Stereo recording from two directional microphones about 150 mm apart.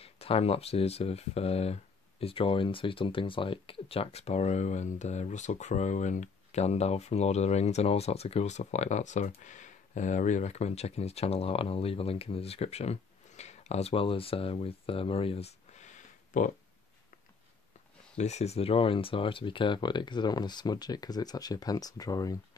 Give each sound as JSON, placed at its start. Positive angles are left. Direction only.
{"t": 0.0, "sound": "speech", "side_deg": 40}
{"t": 18.1, "sound": "speech", "side_deg": 45}